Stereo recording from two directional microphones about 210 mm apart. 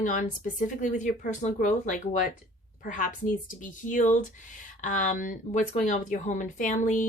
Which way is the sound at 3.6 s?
40° left (ahead or behind).